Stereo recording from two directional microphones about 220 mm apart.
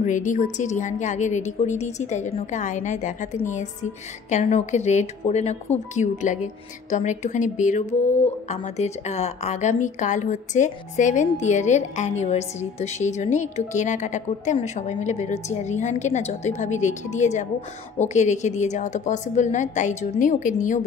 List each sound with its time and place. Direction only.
0.0 s a woman's voice: 35° left (ahead or behind)